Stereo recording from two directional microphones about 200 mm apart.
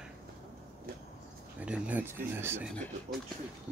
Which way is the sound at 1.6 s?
5° right (ahead or behind).